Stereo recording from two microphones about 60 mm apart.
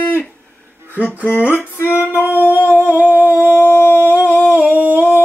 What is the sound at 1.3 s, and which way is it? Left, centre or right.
Music, left.